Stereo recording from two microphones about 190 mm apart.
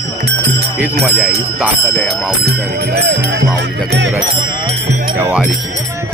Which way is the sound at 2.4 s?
55° right (ahead or behind).